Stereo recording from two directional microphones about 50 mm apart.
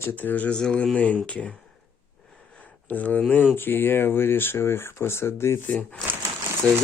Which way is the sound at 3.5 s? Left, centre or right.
Left.